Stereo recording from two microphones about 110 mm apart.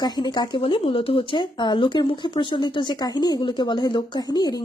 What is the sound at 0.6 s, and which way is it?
Speech, 55° left (ahead or behind).